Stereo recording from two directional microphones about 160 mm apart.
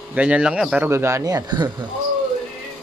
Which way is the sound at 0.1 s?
5° right (ahead or behind).